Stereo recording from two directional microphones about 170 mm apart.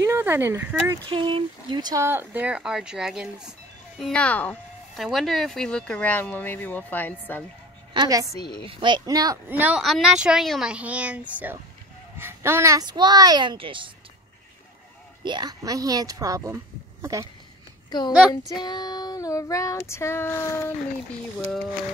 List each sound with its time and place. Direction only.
0.0 s speech: 15° right (ahead or behind)
1.0 s speech: 30° right (ahead or behind)
2.0 s speech: 10° right (ahead or behind); by 7.4 s 10° left (ahead or behind)
7.9 s a woman's voice: 20° right (ahead or behind)
8.3 s female singing: 25° left (ahead or behind)
8.6 s speech: 30° right (ahead or behind)
9.5 s speech: 10° right (ahead or behind); by 13.8 s 30° right (ahead or behind)
15.2 s speech: 25° right (ahead or behind)
17.8 s a woman's voice: 25° left (ahead or behind)
18.6 s female singing: 25° left (ahead or behind)